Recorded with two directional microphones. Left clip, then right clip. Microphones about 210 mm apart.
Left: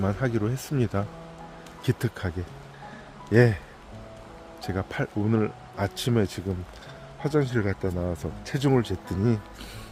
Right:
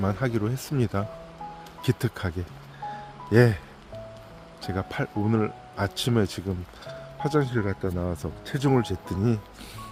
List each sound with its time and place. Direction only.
0.0 s speech: 10° right (ahead or behind)
4.6 s speech: 10° right (ahead or behind)
7.9 s speech: 15° right (ahead or behind)